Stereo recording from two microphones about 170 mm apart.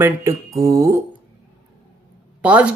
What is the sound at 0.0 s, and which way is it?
Speech, 15° right (ahead or behind).